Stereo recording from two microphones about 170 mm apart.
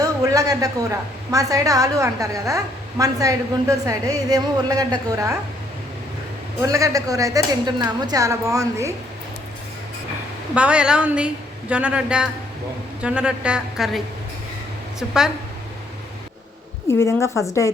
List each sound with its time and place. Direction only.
0.0 s a woman's voice: 20° right (ahead or behind)
6.6 s a woman's voice: 20° right (ahead or behind)
10.5 s a woman's voice: 5° right (ahead or behind)
16.9 s a woman's voice: 15° left (ahead or behind)